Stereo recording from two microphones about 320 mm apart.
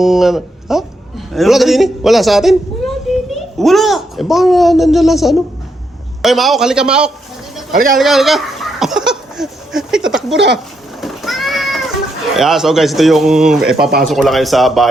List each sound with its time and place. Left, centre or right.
0.0 s a man's voice: centre
7.7 s speech: right
7.9 s a sound: centre
10.3 s speech: right
11.0 s cat: centre
12.4 s speech: centre